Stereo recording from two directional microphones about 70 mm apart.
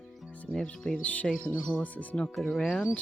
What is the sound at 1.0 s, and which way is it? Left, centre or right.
Speech, left.